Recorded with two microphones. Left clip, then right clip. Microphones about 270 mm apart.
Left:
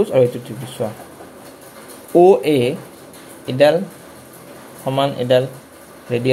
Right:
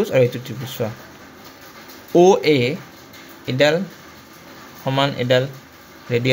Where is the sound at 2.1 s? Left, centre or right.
Right.